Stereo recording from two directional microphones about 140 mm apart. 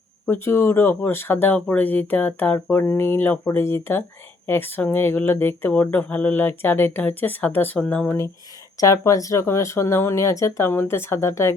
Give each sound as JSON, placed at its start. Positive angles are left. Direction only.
{"t": 0.3, "sound": "speech", "side_deg": 15}